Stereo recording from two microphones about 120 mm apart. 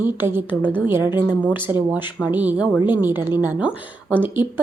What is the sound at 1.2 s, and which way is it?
Speech, 10° left (ahead or behind).